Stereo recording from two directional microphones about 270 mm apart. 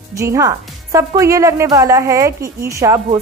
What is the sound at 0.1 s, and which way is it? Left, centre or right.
A woman's voice, centre.